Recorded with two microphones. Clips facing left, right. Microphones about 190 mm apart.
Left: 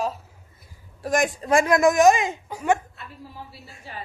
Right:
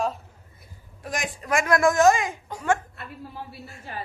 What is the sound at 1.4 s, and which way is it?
A woman's voice, 25° left (ahead or behind).